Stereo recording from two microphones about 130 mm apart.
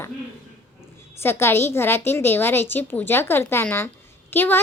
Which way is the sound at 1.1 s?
20° left (ahead or behind).